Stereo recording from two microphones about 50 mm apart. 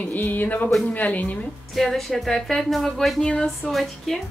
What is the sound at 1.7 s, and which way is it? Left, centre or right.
A woman's voice, centre.